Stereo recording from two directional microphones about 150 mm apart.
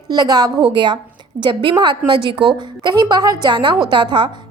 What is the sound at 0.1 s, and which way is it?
A woman's voice, 25° right (ahead or behind).